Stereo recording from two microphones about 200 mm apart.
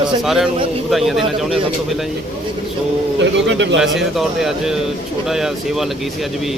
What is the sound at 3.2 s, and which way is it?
Speech, 65° right (ahead or behind).